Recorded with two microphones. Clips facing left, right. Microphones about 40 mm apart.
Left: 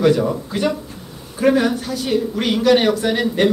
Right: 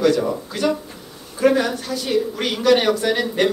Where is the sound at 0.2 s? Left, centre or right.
Centre.